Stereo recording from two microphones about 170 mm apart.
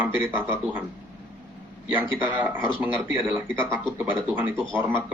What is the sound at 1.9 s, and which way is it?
Speech, 10° right (ahead or behind).